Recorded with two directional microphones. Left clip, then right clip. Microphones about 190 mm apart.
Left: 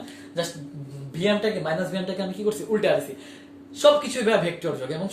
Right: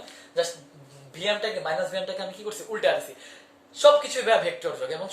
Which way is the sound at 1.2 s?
25° right (ahead or behind).